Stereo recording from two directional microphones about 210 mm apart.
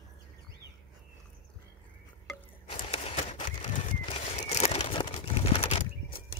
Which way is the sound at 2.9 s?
30° left (ahead or behind).